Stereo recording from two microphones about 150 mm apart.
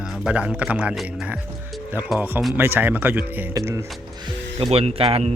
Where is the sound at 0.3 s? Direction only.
10° right (ahead or behind).